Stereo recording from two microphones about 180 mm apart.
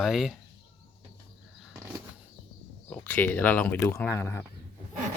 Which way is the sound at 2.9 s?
10° left (ahead or behind).